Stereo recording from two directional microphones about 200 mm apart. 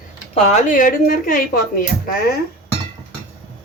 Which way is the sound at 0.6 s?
40° left (ahead or behind).